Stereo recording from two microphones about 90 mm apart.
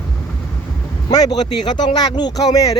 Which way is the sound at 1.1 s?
45° left (ahead or behind).